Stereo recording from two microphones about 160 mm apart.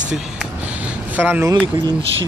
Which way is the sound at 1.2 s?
10° right (ahead or behind).